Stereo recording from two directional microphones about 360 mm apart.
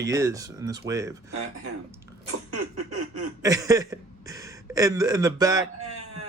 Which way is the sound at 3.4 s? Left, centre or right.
Centre.